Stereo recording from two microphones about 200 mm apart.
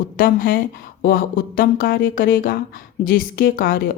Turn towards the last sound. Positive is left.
turn(degrees=45)  # may be behind; listen again after turning